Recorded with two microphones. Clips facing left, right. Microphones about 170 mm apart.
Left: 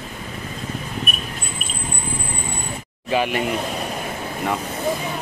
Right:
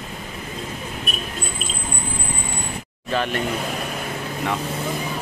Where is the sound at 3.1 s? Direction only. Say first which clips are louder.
Left 3 dB; 10° left (ahead or behind).